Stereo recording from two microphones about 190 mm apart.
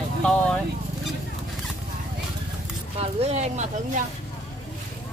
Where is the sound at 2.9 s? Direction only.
30° right (ahead or behind).